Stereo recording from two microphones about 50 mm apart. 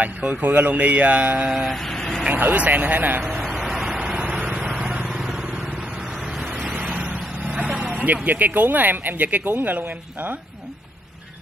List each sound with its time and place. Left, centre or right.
0.0 s speech: right
1.6 s a sound: centre
2.2 s speech: right
3.5 s vehicle: centre
4.2 s vehicle: right
6.9 s vehicle: right
7.6 s speech: right